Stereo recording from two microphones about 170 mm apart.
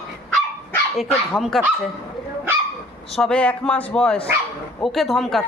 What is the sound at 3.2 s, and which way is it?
A man's voice, 5° left (ahead or behind).